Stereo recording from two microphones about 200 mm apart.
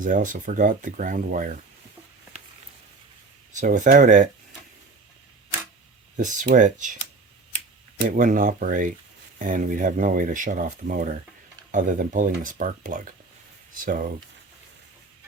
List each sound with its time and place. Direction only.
0.0 s speech: 40° right (ahead or behind)
3.5 s speech: 40° right (ahead or behind)
6.1 s speech: 40° right (ahead or behind)
8.1 s speech: 40° right (ahead or behind)